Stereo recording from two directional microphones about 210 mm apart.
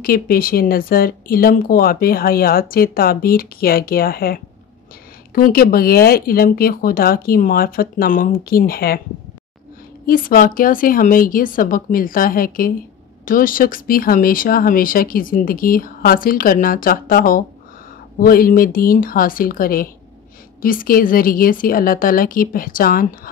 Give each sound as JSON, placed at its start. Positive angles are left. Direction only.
{"t": 0.0, "sound": "speech", "side_deg": 45}
{"t": 10.0, "sound": "speech", "side_deg": 40}